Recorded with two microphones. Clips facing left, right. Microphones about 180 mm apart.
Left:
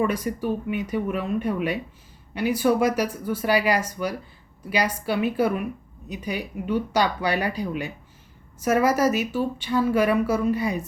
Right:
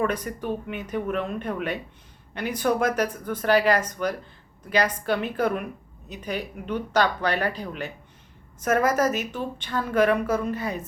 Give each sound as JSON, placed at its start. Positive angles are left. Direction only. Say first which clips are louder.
{"t": 0.0, "sound": "speech", "louder": "left 2 dB", "side_deg": 10}